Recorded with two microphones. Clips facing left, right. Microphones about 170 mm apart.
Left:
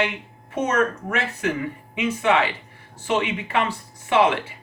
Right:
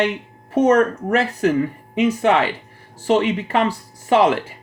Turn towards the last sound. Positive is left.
turn(degrees=-40)  # may be behind; listen again after turning